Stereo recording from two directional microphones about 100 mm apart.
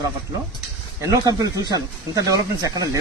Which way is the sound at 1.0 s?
35° right (ahead or behind).